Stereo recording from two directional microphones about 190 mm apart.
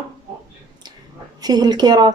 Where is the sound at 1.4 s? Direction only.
20° right (ahead or behind).